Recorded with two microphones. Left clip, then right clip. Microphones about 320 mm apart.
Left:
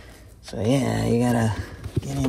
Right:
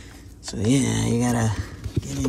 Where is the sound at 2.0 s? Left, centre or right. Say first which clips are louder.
Left 1 dB; left.